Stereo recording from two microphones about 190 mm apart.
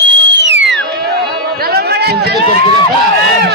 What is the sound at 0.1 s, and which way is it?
Whistle, 70° right (ahead or behind).